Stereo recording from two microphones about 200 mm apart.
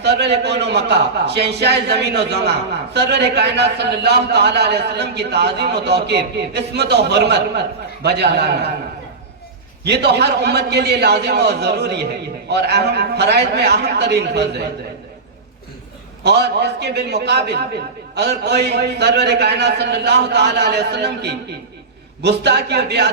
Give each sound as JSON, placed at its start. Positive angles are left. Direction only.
{"t": 0.0, "sound": "a man's voice", "side_deg": -55}
{"t": 9.8, "sound": "a man's voice", "side_deg": -55}
{"t": 16.2, "sound": "a man's voice", "side_deg": -55}